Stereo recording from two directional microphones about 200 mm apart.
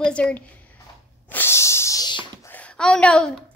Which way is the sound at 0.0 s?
5° left (ahead or behind).